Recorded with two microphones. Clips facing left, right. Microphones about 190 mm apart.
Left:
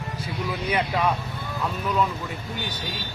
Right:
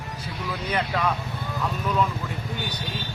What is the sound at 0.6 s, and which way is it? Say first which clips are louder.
Speech: left 1 dB; 10° left (ahead or behind).